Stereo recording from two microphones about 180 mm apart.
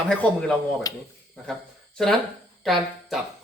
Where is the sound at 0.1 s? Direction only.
5° left (ahead or behind).